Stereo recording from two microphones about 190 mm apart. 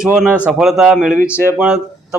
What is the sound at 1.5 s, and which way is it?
Speech, 5° right (ahead or behind).